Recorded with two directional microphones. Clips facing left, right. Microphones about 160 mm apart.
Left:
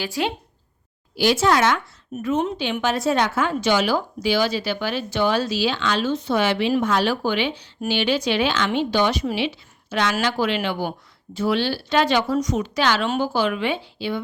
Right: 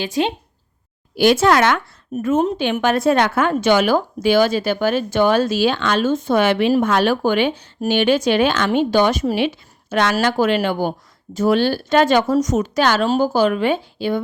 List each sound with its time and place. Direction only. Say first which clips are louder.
0.0 s speech: right 5 dB; 20° right (ahead or behind)
1.1 s speech: right 5 dB; 55° right (ahead or behind)
2.1 s speech: right 5 dB; 45° right (ahead or behind)